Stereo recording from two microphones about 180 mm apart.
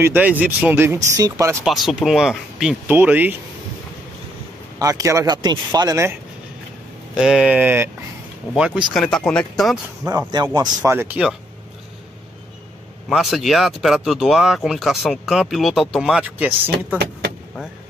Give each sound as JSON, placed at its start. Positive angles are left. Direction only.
{"t": 0.0, "sound": "speech", "side_deg": -10}
{"t": 1.6, "sound": "speech", "side_deg": 0}
{"t": 4.7, "sound": "speech", "side_deg": -20}
{"t": 7.2, "sound": "speech", "side_deg": -5}
{"t": 10.0, "sound": "speech", "side_deg": -20}
{"t": 10.8, "sound": "speech", "side_deg": -10}
{"t": 13.1, "sound": "speech", "side_deg": 0}